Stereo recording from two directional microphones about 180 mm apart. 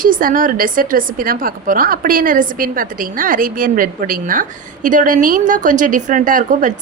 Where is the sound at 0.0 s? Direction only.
50° right (ahead or behind).